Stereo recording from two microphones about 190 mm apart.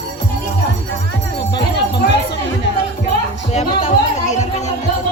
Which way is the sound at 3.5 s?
35° left (ahead or behind).